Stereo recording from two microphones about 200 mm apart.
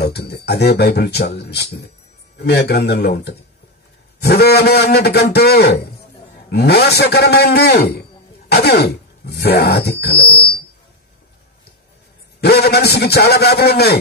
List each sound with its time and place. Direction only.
0.0 s a man's voice: 55° left (ahead or behind)
12.4 s speech: 55° left (ahead or behind)